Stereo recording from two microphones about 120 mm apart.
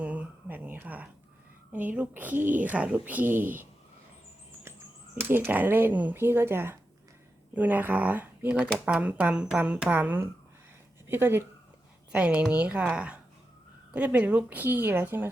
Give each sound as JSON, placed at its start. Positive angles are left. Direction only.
{"t": 0.0, "sound": "a sound", "side_deg": -10}
{"t": 1.7, "sound": "speech", "side_deg": -15}
{"t": 5.1, "sound": "speech", "side_deg": -20}